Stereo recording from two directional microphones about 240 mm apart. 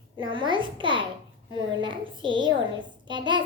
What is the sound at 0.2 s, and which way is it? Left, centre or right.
A child's voice, centre.